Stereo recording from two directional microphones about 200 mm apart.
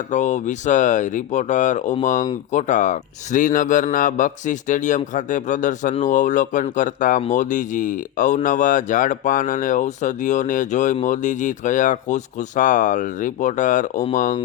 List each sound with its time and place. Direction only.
0.1 s speech: 35° left (ahead or behind)